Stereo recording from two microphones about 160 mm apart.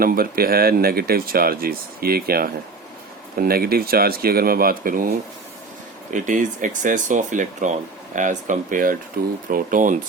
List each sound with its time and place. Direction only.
0.0 s speech: 70° right (ahead or behind)
6.1 s speech: 50° right (ahead or behind)